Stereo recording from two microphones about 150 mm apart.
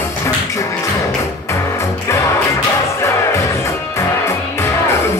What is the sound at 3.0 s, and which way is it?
Music, 20° left (ahead or behind).